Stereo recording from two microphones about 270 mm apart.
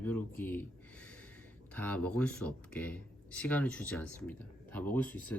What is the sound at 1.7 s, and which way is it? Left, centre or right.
Speech, centre.